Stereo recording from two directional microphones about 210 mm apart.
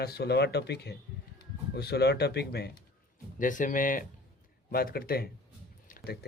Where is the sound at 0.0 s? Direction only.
50° left (ahead or behind).